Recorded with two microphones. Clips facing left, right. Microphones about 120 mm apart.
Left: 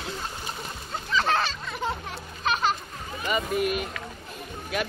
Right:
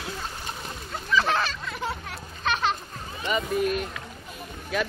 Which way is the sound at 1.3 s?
30° left (ahead or behind).